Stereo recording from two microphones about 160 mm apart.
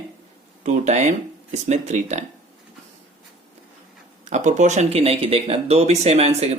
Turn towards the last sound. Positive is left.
turn(degrees=-40)  # may be behind; listen again after turning